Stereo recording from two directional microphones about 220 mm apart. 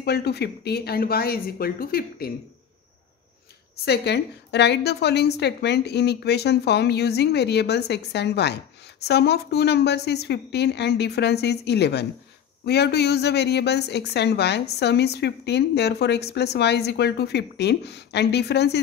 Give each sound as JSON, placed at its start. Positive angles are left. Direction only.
{"t": 0.0, "sound": "a woman's voice", "side_deg": 45}
{"t": 3.7, "sound": "a woman's voice", "side_deg": 50}